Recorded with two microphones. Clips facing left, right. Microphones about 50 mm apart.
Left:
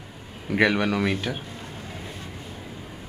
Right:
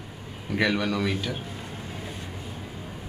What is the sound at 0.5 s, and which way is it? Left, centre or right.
Speech, left.